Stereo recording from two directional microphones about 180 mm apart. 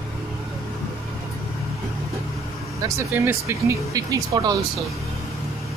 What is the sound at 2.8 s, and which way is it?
Speech, 15° right (ahead or behind).